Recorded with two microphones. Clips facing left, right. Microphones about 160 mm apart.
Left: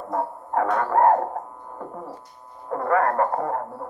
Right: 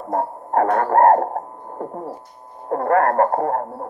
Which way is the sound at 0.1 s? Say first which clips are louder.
Right 5 dB; 50° right (ahead or behind).